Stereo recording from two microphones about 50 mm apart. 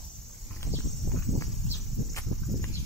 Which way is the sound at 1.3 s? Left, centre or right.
Left.